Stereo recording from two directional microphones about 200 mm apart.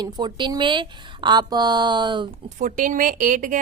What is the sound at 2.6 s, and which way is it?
Speech, 40° right (ahead or behind).